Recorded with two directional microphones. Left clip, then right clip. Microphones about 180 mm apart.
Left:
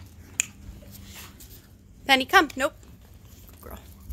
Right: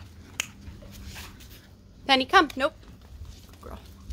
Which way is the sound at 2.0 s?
5° left (ahead or behind).